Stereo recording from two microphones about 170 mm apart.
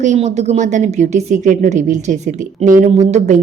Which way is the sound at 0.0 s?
45° right (ahead or behind).